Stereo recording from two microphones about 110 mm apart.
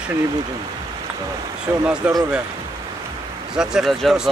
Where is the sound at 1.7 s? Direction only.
20° right (ahead or behind).